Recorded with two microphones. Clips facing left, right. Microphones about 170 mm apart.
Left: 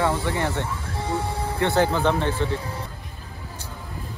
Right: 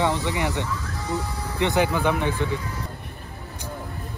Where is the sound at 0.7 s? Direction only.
30° left (ahead or behind).